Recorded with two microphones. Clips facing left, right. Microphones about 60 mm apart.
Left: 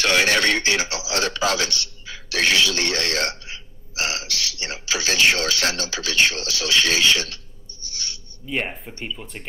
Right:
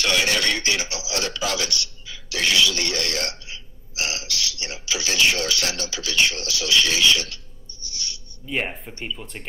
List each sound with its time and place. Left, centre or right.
0.0 s a man's voice: left
7.8 s owl: left
8.5 s speech: centre